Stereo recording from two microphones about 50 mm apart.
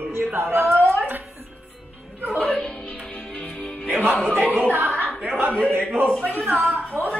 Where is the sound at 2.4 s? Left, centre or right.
Left.